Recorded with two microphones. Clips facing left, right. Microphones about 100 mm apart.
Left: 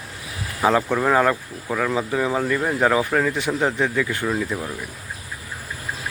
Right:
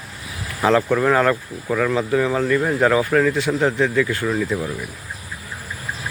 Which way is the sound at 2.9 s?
15° left (ahead or behind).